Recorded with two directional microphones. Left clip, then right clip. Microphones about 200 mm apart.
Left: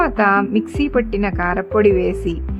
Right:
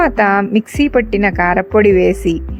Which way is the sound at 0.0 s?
15° right (ahead or behind).